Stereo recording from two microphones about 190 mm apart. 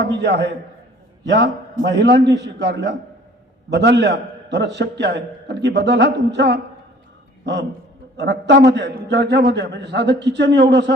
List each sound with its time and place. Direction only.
0.0 s a man's voice: 65° right (ahead or behind)